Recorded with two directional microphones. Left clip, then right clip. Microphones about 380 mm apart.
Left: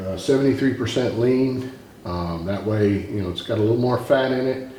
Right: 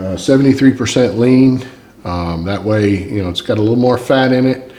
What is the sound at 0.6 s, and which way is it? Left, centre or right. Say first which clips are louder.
Speech: right 9 dB; right.